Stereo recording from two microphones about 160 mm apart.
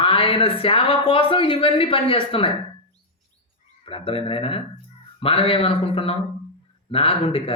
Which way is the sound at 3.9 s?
35° left (ahead or behind).